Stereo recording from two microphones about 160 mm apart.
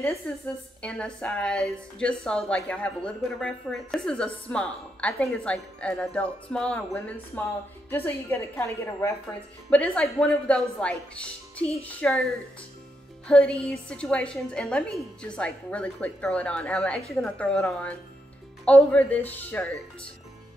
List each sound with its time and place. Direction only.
0.3 s a woman's voice: 5° left (ahead or behind)